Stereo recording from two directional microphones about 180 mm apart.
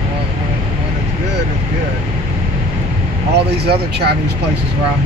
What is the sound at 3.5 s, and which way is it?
Speech, 65° right (ahead or behind).